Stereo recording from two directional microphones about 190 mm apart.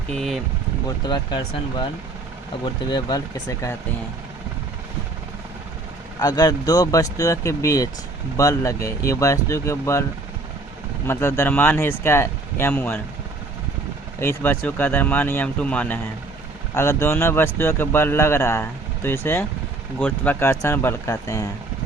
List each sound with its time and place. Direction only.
0.1 s speech: centre (ahead or behind)
0.9 s speech: 25° left (ahead or behind)
2.9 s speech: 20° left (ahead or behind)
6.1 s speech: 20° left (ahead or behind)
14.2 s speech: 10° left (ahead or behind)